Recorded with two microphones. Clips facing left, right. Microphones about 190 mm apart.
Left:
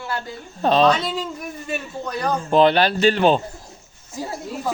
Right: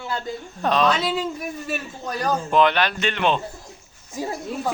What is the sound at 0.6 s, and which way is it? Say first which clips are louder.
Speech: left 4 dB; 30° left (ahead or behind).